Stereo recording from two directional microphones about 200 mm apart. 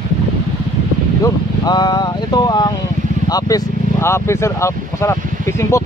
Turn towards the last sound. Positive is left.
turn(degrees=15)  # may be behind; listen again after turning